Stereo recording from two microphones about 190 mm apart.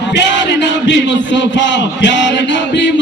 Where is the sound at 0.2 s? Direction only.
70° left (ahead or behind).